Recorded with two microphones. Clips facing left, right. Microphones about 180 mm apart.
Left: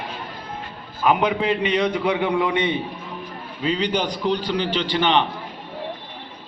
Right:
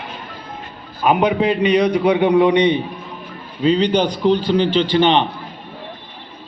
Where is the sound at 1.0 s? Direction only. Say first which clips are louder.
Right 4 dB; 20° right (ahead or behind).